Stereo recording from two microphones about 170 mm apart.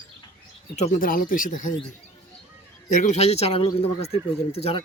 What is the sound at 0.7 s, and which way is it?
Speech, 45° left (ahead or behind).